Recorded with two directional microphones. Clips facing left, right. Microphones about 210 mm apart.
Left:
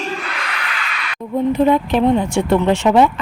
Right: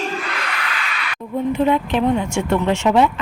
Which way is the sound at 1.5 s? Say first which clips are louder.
Left 3 dB; 40° left (ahead or behind).